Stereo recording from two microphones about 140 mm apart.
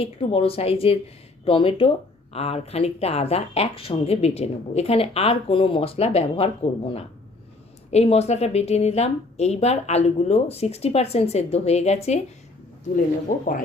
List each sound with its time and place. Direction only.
0.0 s speech: 40° left (ahead or behind)
13.3 s speech: 70° left (ahead or behind)